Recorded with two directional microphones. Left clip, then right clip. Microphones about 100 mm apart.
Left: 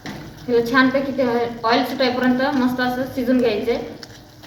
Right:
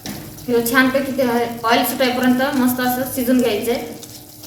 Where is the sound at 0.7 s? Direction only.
15° right (ahead or behind).